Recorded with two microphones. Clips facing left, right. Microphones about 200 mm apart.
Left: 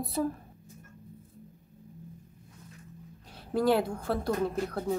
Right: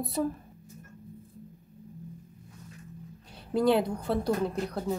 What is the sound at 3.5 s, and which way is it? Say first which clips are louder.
Speech: right 1 dB; centre (ahead or behind).